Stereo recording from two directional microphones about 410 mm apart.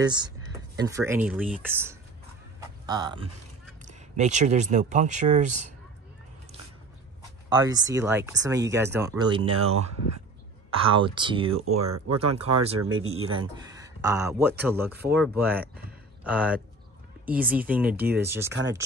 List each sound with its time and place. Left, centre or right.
0.0 s speech: centre
7.4 s speech: centre
9.5 s speech: right
10.8 s speech: centre
11.6 s speech: right
13.2 s speech: centre
15.5 s speech: right
16.3 s speech: centre